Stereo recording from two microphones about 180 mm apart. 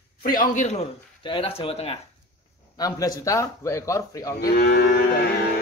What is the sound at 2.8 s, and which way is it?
Speech, 20° left (ahead or behind).